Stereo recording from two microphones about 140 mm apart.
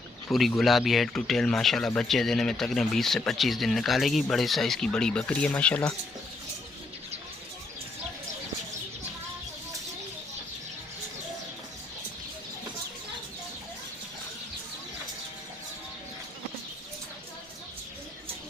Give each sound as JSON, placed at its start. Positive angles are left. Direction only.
{"t": 0.3, "sound": "speech", "side_deg": 0}